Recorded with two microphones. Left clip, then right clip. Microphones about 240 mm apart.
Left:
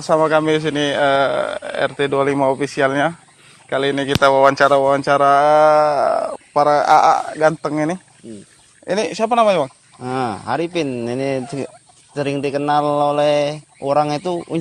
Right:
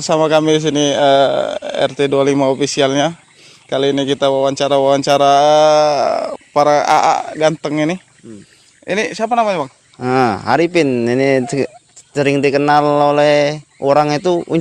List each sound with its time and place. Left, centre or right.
0.0 s speech: right
8.9 s speech: centre
9.1 s speech: centre
10.0 s a man's voice: right